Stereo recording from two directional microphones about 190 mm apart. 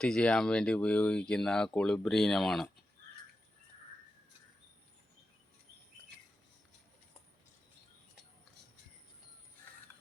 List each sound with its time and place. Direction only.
0.0 s speech: 5° left (ahead or behind)